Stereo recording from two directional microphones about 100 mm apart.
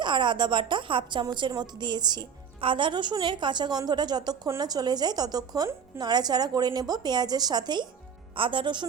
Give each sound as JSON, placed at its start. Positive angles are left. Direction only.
{"t": 0.0, "sound": "a woman's voice", "side_deg": -50}